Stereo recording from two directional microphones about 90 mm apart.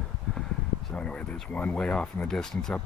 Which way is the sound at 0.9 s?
10° left (ahead or behind).